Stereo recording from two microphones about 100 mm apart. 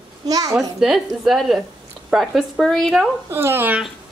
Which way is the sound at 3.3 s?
25° right (ahead or behind).